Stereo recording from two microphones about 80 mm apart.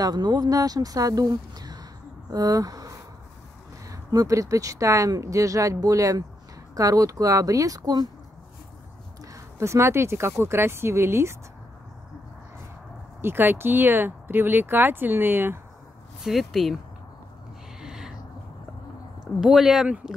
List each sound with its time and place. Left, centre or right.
0.0 s speech: right
9.2 s speech: right
13.2 s speech: right
16.2 s speech: centre
17.7 s a sound: centre
19.4 s speech: centre